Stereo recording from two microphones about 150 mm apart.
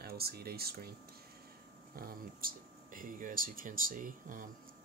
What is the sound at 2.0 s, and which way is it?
Speech, 75° right (ahead or behind).